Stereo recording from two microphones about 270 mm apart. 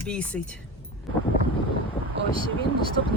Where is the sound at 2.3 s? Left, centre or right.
Centre.